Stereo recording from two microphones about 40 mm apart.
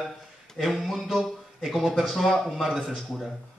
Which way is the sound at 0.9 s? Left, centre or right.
Centre.